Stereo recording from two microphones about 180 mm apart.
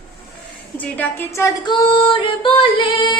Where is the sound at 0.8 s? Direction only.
10° left (ahead or behind).